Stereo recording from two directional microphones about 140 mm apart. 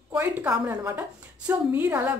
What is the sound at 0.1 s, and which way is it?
A woman's voice, 15° right (ahead or behind).